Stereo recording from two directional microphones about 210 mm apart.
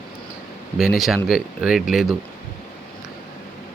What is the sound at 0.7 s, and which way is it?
Speech, centre (ahead or behind).